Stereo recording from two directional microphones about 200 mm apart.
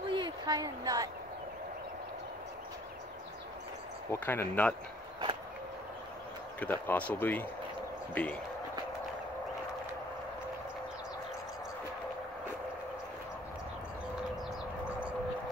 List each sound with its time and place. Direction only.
0.1 s a sound: 20° right (ahead or behind)
4.1 s speech: 10° left (ahead or behind)
6.6 s speech: 10° left (ahead or behind)